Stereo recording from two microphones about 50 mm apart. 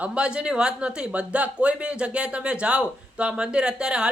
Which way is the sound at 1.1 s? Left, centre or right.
Right.